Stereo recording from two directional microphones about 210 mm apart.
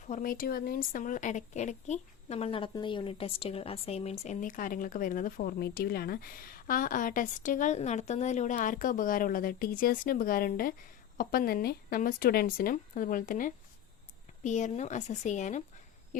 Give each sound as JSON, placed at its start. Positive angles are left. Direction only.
{"t": 0.1, "sound": "a woman's voice", "side_deg": 40}